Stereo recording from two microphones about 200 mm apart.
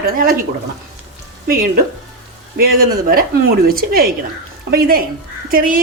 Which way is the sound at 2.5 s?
50° right (ahead or behind).